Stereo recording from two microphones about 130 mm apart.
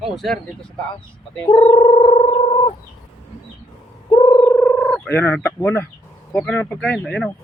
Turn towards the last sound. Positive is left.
turn(degrees=10)  # may be behind; listen again after turning